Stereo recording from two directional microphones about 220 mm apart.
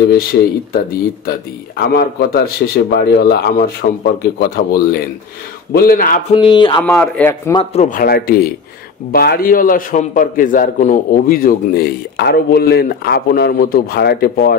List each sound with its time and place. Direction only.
1.8 s a man's voice: 45° left (ahead or behind)
6.3 s speech: 20° left (ahead or behind)
6.8 s speech: 5° left (ahead or behind)
7.5 s a man's voice: 30° left (ahead or behind)